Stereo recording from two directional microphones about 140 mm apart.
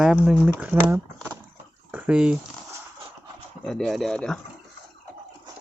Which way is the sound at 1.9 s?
5° right (ahead or behind).